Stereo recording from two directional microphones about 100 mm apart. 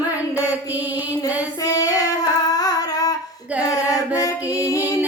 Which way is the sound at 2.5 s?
40° left (ahead or behind).